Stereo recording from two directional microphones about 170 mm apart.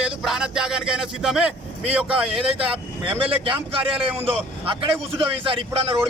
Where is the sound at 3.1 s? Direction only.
30° right (ahead or behind).